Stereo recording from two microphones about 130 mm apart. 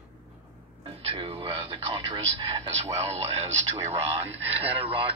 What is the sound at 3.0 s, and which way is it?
Speech, 55° right (ahead or behind).